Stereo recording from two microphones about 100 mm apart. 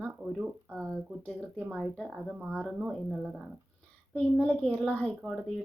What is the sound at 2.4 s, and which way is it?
Speech, 15° right (ahead or behind).